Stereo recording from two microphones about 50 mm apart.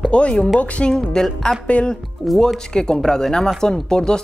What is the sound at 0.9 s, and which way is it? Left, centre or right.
Speech, centre.